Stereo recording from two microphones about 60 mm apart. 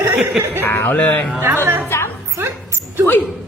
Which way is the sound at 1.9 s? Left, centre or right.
Left.